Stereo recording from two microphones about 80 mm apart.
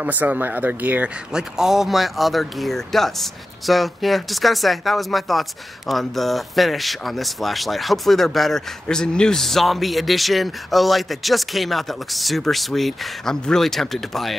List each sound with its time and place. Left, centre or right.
0.0 s speech: right
1.3 s speech: centre